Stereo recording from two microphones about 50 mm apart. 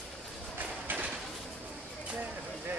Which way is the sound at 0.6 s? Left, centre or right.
Right.